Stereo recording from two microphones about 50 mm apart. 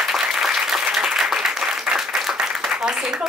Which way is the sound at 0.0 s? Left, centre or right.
Centre.